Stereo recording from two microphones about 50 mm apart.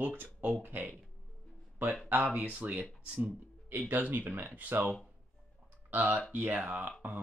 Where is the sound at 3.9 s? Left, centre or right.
Right.